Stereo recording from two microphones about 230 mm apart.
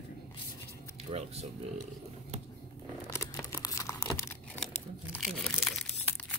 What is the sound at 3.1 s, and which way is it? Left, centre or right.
Computer keyboard, centre.